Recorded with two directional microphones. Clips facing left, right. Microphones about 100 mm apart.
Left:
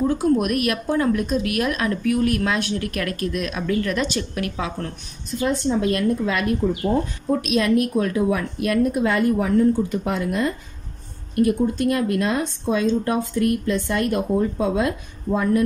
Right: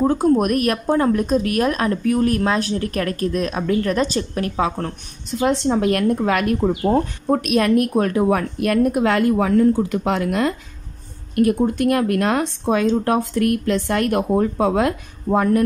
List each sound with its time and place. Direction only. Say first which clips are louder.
0.0 s speech: right 3 dB; 45° right (ahead or behind)
5.4 s speech: right 3 dB; 70° right (ahead or behind)
11.3 s speech: right 2 dB; 60° right (ahead or behind)